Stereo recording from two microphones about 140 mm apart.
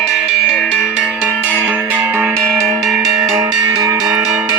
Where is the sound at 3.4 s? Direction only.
30° right (ahead or behind).